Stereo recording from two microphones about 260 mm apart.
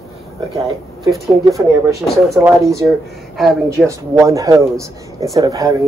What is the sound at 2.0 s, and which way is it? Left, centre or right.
Speech, centre.